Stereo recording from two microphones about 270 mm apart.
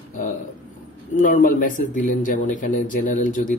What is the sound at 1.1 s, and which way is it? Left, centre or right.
Speech, left.